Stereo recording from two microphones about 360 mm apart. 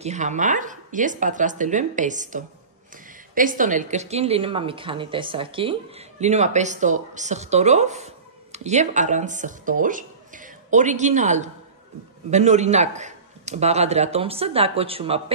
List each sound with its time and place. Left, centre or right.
0.0 s a woman's voice: centre